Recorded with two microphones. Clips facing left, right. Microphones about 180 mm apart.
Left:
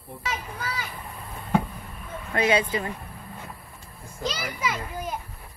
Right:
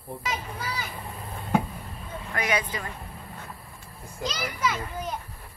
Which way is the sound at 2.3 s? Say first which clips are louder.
Left 5 dB; 25° left (ahead or behind).